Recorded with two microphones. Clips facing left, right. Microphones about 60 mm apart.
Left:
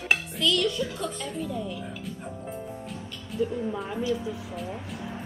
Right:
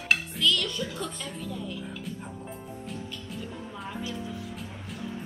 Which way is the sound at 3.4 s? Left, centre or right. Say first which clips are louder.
Left 16 dB; centre.